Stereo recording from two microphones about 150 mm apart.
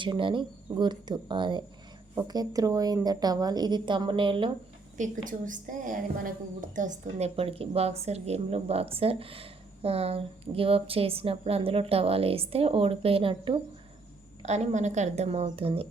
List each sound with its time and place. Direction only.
0.0 s a woman's voice: 35° right (ahead or behind)
4.9 s a woman's voice: 60° right (ahead or behind); by 13.6 s 35° right (ahead or behind)
14.4 s a woman's voice: 50° right (ahead or behind)